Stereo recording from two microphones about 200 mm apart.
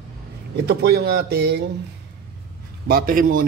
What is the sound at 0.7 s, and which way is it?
Speech, 55° right (ahead or behind).